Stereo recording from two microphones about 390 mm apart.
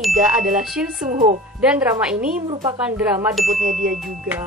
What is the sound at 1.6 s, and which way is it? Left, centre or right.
A woman's voice, centre.